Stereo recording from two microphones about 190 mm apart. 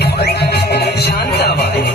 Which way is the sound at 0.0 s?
60° left (ahead or behind).